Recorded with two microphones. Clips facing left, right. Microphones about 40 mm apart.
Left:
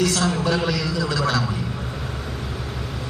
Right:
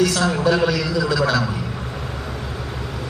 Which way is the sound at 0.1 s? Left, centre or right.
Right.